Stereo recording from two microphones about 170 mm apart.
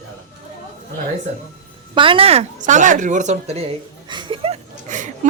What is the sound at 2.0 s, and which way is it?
Speech, 30° right (ahead or behind).